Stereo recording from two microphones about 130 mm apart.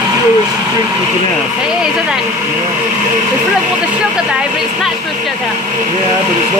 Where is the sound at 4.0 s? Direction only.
5° right (ahead or behind).